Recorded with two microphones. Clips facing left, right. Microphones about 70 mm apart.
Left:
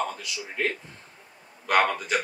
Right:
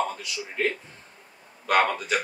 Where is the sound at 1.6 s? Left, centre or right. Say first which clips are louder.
Even; centre.